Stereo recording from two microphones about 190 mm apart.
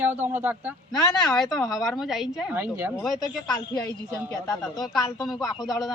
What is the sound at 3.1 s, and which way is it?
Speech, 20° left (ahead or behind).